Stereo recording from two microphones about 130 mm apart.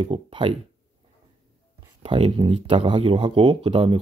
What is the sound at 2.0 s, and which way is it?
Speech, 40° right (ahead or behind).